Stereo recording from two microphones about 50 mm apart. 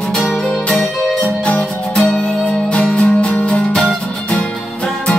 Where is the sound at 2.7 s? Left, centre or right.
Left.